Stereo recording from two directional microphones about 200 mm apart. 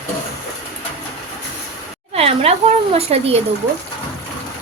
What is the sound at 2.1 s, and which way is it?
Speech, 30° right (ahead or behind).